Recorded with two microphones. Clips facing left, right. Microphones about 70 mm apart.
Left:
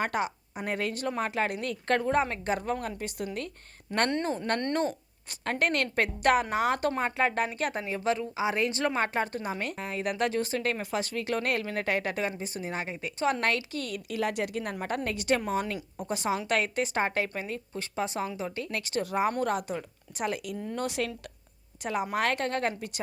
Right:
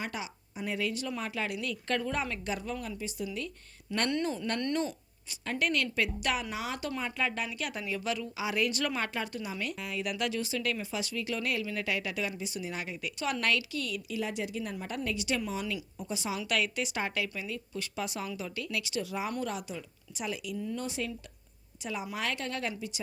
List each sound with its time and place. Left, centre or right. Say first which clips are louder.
0.0 s a woman's voice: left 9 dB; left
21.8 s a woman's voice: left 7 dB; left